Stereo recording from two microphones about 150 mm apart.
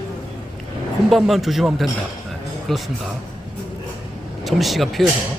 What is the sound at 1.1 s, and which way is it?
Speech, centre (ahead or behind).